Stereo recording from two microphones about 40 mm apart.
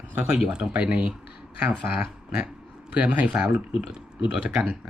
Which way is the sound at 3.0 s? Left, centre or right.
Right.